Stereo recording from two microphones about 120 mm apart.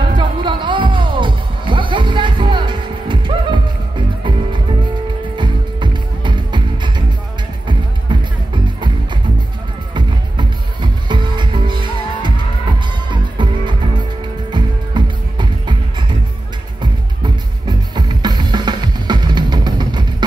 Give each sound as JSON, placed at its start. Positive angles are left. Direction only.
{"t": 0.0, "sound": "music", "side_deg": -40}
{"t": 5.4, "sound": "music", "side_deg": -40}
{"t": 8.1, "sound": "music", "side_deg": -40}
{"t": 9.9, "sound": "music", "side_deg": -40}